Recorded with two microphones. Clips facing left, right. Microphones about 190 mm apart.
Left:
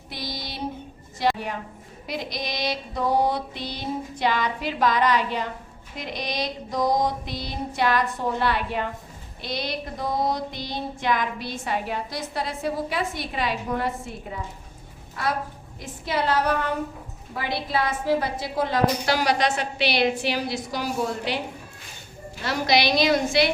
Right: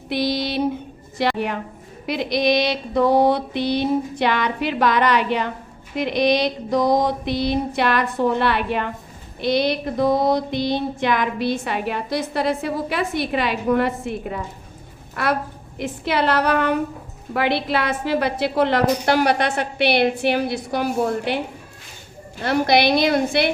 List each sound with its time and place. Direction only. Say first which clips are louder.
0.1 s a sound: right 13 dB; 70° right (ahead or behind)
1.2 s music: right 3 dB; 70° right (ahead or behind)
15.1 s a woman's voice: right 5 dB; 70° right (ahead or behind)
15.8 s music: right 6 dB; 70° right (ahead or behind)
17.3 s a woman's voice: right 6 dB; 75° right (ahead or behind); by 21.4 s 55° right (ahead or behind)
22.4 s a woman's voice: right 5 dB; 55° right (ahead or behind)